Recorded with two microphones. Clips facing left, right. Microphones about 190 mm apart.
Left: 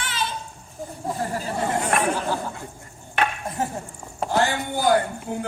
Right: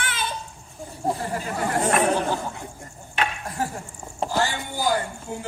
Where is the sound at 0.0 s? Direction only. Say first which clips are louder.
Left 1 dB; 55° right (ahead or behind).